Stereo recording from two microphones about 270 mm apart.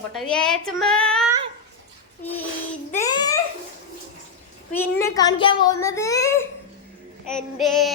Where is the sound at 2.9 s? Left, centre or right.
Centre.